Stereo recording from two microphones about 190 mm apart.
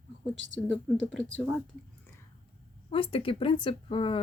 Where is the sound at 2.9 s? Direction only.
30° left (ahead or behind).